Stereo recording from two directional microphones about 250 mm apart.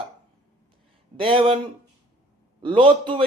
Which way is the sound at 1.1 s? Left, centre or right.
Right.